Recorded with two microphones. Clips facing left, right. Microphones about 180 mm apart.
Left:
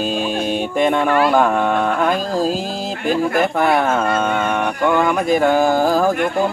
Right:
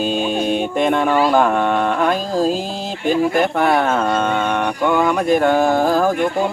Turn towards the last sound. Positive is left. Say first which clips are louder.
# even
turn(degrees=0)  # may be behind; listen again after turning